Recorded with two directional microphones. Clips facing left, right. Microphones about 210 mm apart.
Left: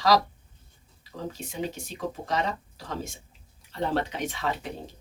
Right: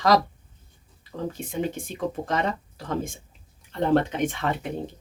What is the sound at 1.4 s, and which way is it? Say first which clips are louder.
Speech: right 5 dB; 50° right (ahead or behind).